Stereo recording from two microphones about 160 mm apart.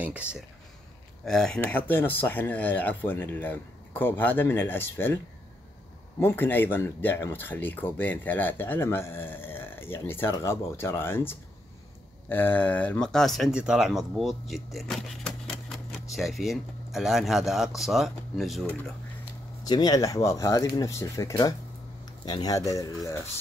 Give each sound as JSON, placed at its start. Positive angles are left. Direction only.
{"t": 0.0, "sound": "speech", "side_deg": -10}
{"t": 1.2, "sound": "speech", "side_deg": 5}
{"t": 19.6, "sound": "speech", "side_deg": 25}